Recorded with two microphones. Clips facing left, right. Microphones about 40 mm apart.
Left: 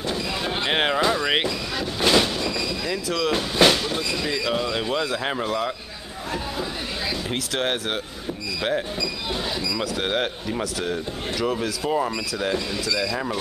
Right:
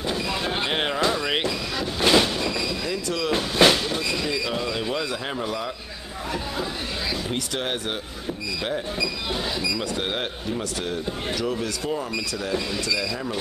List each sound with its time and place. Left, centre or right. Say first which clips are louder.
0.7 s a sound: left 4 dB; centre
1.8 s train: even; centre
4.3 s speech: left 2 dB; centre
9.9 s speech: left 3 dB; centre